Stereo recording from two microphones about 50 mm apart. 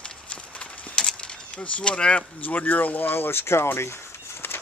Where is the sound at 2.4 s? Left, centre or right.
Left.